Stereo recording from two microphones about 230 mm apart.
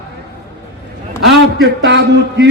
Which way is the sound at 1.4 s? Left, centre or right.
Right.